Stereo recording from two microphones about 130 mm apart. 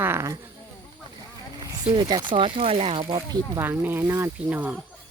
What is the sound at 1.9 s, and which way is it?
Speech, 35° right (ahead or behind).